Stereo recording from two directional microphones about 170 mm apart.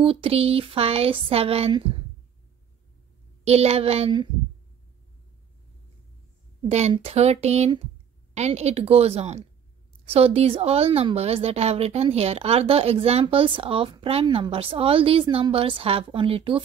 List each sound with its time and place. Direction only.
0.0 s a woman's voice: 35° right (ahead or behind)
3.4 s a woman's voice: 40° right (ahead or behind)
6.6 s a woman's voice: 40° right (ahead or behind)